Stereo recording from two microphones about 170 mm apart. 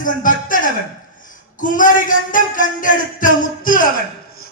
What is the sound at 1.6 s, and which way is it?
Speech, 50° left (ahead or behind).